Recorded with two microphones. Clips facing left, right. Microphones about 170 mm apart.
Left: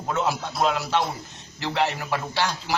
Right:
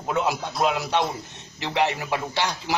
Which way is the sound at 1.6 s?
20° right (ahead or behind).